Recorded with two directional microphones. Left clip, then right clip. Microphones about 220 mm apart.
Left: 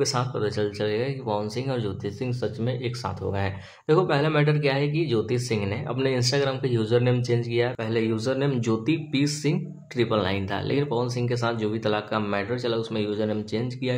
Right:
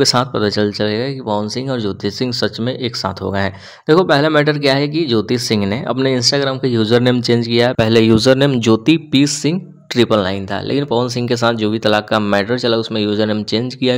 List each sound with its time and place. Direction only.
0.0 s speech: 45° right (ahead or behind)